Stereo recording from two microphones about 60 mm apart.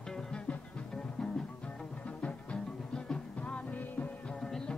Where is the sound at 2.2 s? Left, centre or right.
Centre.